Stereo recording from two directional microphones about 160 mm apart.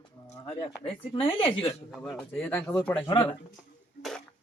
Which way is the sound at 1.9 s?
5° left (ahead or behind).